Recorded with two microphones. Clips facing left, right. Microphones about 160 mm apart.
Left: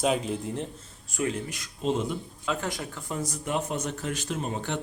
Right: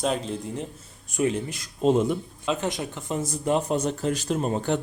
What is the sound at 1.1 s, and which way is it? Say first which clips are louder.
Speech: right 5 dB; 20° right (ahead or behind).